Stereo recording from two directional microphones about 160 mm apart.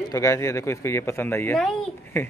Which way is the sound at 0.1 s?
20° left (ahead or behind).